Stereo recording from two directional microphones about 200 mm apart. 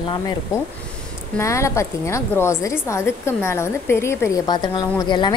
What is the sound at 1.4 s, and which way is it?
A woman's voice, 15° left (ahead or behind).